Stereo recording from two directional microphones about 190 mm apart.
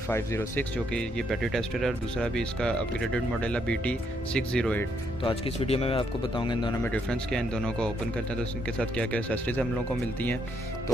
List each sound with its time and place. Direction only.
0.1 s speech: 10° left (ahead or behind)
5.2 s speech: 30° left (ahead or behind)
6.8 s speech: 5° left (ahead or behind)